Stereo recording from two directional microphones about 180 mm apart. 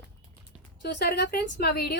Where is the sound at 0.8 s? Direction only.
70° left (ahead or behind).